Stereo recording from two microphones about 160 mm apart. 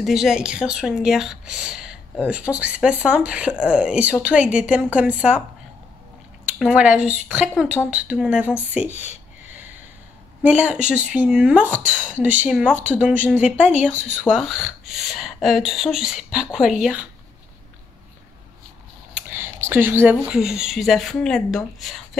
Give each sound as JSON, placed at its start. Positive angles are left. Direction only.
{"t": 0.0, "sound": "speech", "side_deg": 0}
{"t": 6.6, "sound": "speech", "side_deg": -5}
{"t": 8.9, "sound": "speech", "side_deg": 45}
{"t": 10.4, "sound": "speech", "side_deg": -10}
{"t": 19.1, "sound": "speech", "side_deg": -15}